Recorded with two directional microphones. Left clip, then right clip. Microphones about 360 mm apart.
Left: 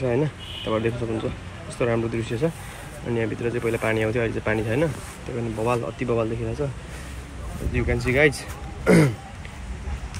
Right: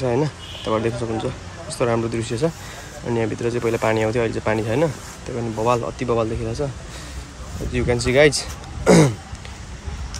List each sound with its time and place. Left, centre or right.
0.0 s speech: centre
7.7 s speech: centre